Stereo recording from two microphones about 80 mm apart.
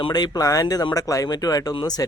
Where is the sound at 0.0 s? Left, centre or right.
Left.